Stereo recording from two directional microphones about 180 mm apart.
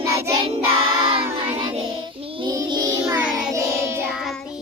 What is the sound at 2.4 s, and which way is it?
Child singing, 20° right (ahead or behind).